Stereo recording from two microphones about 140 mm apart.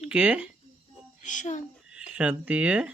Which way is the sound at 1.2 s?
60° left (ahead or behind).